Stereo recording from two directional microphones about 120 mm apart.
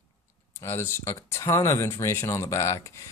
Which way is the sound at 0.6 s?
20° left (ahead or behind).